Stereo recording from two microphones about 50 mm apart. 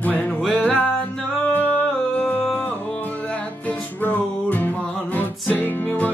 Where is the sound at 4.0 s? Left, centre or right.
Left.